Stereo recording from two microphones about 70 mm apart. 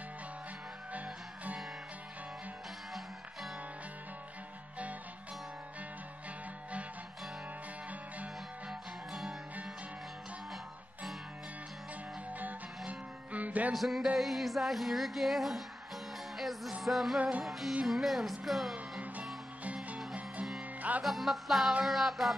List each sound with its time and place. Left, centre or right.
0.9 s music: right
8.6 s music: centre
12.4 s music: right
13.7 s female singing: centre
16.3 s music: centre
16.8 s female singing: centre
17.4 s music: centre
17.8 s female singing: centre
19.6 s music: right
21.0 s female singing: centre